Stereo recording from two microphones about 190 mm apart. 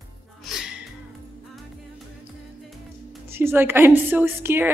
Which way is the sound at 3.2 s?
10° right (ahead or behind).